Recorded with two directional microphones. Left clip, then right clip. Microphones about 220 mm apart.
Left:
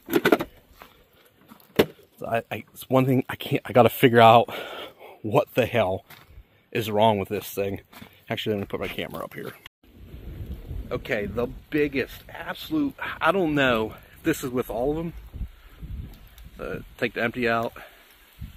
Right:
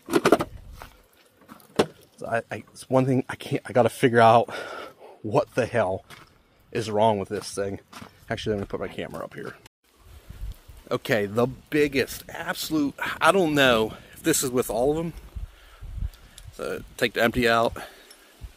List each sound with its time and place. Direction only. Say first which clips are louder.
0.2 s a sound: right 1 dB; 10° left (ahead or behind)
2.1 s speech: left 1 dB; 25° left (ahead or behind)
5.5 s speech: left 1 dB; 25° left (ahead or behind)
10.9 s speech: right 3 dB; 30° right (ahead or behind)
11.7 s speech: right 1 dB; 70° right (ahead or behind); by 15.1 s 55° right (ahead or behind)
16.5 s speech: right 3 dB; 55° right (ahead or behind)